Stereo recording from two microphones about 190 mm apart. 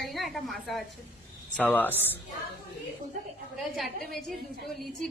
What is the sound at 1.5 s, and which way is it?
Speech, 5° left (ahead or behind).